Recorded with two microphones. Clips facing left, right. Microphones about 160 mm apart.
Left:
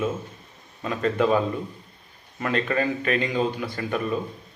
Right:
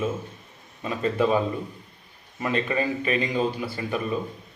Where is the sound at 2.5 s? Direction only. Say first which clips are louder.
Left 1 dB; 10° right (ahead or behind).